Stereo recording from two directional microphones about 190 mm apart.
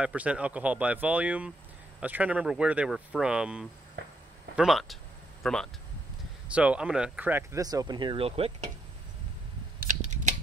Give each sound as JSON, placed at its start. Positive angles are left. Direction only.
{"t": 0.0, "sound": "speech", "side_deg": -5}
{"t": 9.8, "sound": "scissors", "side_deg": -40}